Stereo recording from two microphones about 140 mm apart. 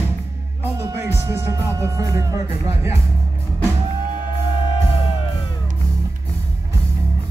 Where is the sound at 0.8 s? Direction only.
20° right (ahead or behind).